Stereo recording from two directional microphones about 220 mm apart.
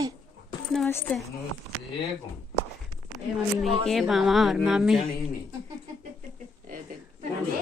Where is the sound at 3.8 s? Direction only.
Centre (ahead or behind).